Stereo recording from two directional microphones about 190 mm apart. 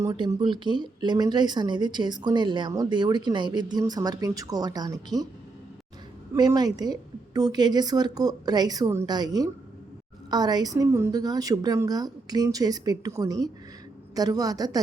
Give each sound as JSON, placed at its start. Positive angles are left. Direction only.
{"t": 0.0, "sound": "speech", "side_deg": -25}
{"t": 6.3, "sound": "speech", "side_deg": -20}